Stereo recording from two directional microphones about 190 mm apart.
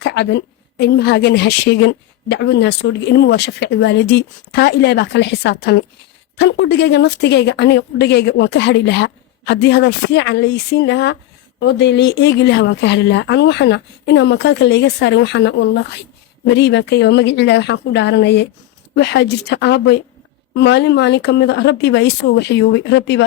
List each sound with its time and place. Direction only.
0.0 s a woman's voice: 65° left (ahead or behind)